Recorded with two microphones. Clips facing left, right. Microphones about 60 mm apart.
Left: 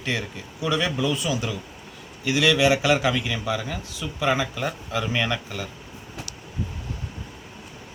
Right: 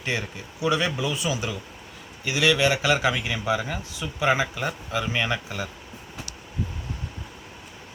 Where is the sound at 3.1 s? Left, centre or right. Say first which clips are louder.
Right 1 dB; centre.